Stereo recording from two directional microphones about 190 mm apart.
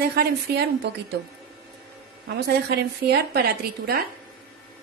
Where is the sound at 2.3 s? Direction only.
60° right (ahead or behind).